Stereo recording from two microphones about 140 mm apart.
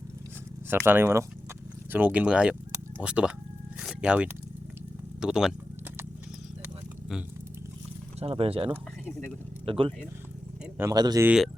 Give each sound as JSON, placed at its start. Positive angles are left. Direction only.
{"t": 0.7, "sound": "speech", "side_deg": -15}
{"t": 8.2, "sound": "speech", "side_deg": -45}
{"t": 8.7, "sound": "speech", "side_deg": 15}
{"t": 9.6, "sound": "speech", "side_deg": -40}
{"t": 10.8, "sound": "speech", "side_deg": -25}